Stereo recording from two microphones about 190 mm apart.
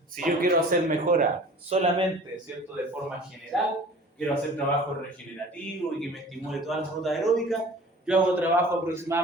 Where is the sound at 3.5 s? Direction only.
Centre (ahead or behind).